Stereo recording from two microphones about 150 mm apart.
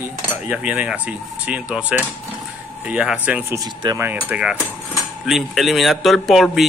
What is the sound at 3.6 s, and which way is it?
Speech, 25° right (ahead or behind).